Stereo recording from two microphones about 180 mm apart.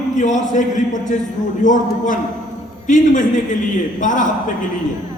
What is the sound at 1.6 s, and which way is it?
A man's voice, 45° left (ahead or behind).